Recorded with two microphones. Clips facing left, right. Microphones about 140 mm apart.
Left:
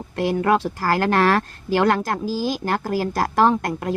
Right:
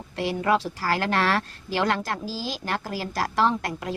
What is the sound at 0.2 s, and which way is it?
Speech, 50° left (ahead or behind).